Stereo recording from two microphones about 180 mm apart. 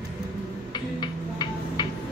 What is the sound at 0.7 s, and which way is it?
Hum, 25° left (ahead or behind).